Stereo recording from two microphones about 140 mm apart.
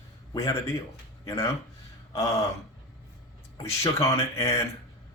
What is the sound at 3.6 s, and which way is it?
Speech, 20° left (ahead or behind).